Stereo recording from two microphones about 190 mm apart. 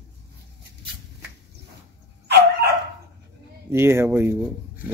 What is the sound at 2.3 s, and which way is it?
Dog, 60° right (ahead or behind).